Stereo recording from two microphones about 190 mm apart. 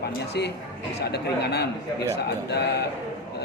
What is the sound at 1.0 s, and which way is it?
A man's voice, 60° left (ahead or behind).